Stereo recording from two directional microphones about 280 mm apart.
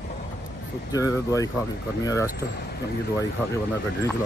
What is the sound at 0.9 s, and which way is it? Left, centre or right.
Speech, centre.